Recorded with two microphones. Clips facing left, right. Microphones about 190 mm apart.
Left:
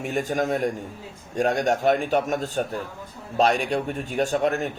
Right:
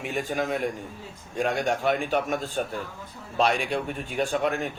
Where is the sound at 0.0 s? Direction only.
45° left (ahead or behind).